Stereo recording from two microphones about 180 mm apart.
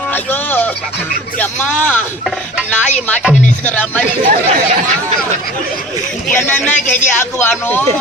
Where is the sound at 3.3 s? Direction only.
45° left (ahead or behind).